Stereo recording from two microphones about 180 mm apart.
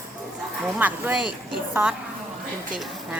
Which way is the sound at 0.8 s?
5° right (ahead or behind).